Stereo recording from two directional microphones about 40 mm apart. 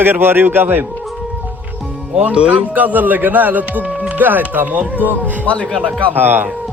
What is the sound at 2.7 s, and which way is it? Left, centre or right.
Speech, right.